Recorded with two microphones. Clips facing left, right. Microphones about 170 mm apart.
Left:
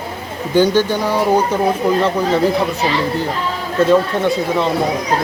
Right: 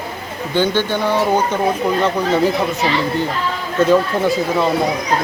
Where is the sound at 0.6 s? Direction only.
40° left (ahead or behind).